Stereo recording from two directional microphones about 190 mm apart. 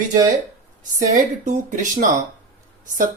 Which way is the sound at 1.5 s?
40° right (ahead or behind).